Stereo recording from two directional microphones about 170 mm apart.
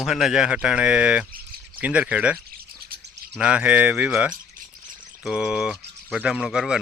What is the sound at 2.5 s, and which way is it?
Insect, 60° right (ahead or behind).